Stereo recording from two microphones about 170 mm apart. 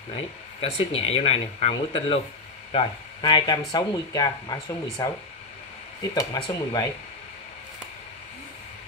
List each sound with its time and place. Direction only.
0.1 s speech: 35° left (ahead or behind)
6.1 s speech: 20° left (ahead or behind)